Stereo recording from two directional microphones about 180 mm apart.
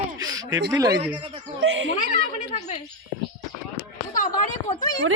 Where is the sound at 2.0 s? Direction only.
35° left (ahead or behind).